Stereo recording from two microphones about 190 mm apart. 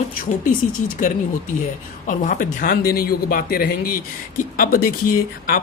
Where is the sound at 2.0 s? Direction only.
45° left (ahead or behind).